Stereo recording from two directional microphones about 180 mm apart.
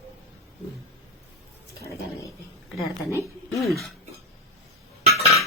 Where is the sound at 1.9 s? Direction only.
15° left (ahead or behind).